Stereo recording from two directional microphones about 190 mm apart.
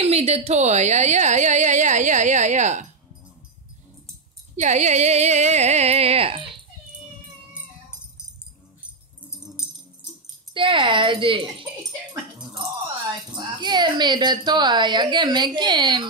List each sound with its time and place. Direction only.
0.0 s a woman's voice: 35° right (ahead or behind)
4.6 s a woman's voice: 40° right (ahead or behind)
10.5 s speech: 25° right (ahead or behind)
13.3 s speech: 25° right (ahead or behind)